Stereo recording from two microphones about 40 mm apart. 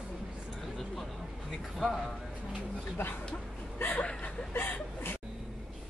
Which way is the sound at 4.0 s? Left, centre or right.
Left.